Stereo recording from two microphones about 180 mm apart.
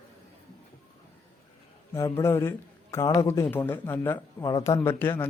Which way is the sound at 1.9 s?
15° left (ahead or behind).